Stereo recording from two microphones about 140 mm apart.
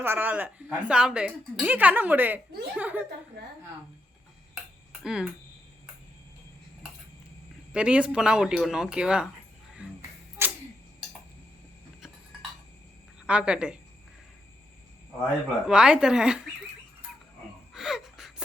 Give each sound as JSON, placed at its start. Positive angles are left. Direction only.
{"t": 0.0, "sound": "a woman's voice", "side_deg": -15}
{"t": 5.0, "sound": "speech", "side_deg": -5}
{"t": 7.7, "sound": "a woman's voice", "side_deg": -10}
{"t": 10.4, "sound": "clock", "side_deg": -15}
{"t": 13.2, "sound": "a woman's voice", "side_deg": -10}
{"t": 15.6, "sound": "speech", "side_deg": -5}
{"t": 17.7, "sound": "gasp", "side_deg": -5}